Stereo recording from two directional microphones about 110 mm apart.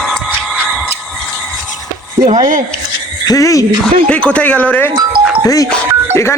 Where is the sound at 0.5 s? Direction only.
5° right (ahead or behind).